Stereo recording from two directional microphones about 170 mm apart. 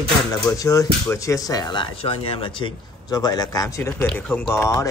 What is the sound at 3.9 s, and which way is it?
Speech, 5° left (ahead or behind).